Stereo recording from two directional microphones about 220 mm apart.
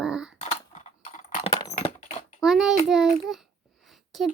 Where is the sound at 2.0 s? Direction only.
35° left (ahead or behind).